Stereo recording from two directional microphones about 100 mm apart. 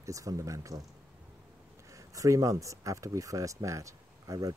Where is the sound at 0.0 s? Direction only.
35° right (ahead or behind).